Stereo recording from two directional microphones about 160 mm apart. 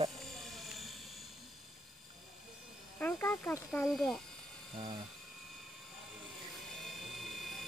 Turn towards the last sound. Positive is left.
turn(degrees=0)  # may be behind; listen again after turning